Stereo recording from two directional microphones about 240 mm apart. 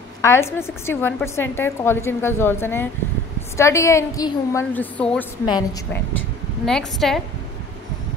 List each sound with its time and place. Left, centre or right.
0.2 s a woman's voice: centre
6.6 s a woman's voice: centre